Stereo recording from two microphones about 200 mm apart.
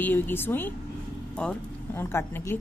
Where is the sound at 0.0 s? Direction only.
10° left (ahead or behind).